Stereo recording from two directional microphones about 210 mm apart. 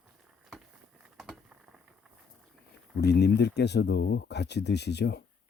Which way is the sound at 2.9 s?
50° left (ahead or behind).